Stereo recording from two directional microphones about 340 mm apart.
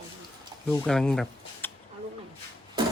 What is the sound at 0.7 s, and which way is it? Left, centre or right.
Speech, centre.